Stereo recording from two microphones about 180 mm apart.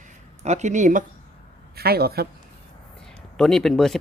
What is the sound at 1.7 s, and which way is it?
Speech, 60° right (ahead or behind).